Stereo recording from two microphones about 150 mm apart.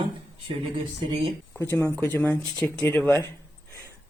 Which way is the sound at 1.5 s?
10° left (ahead or behind).